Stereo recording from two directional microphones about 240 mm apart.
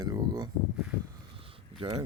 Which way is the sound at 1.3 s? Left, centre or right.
Right.